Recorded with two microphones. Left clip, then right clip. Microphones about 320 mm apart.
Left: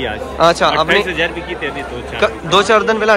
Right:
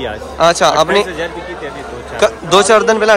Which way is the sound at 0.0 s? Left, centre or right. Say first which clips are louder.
Right 1 dB; centre.